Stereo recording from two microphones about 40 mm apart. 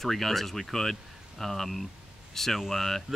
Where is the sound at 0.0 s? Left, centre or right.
Centre.